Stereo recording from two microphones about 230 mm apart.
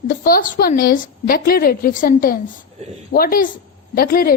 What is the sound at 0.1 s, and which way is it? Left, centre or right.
A woman's voice, left.